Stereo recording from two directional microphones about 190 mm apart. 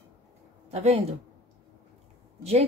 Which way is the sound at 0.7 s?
35° right (ahead or behind).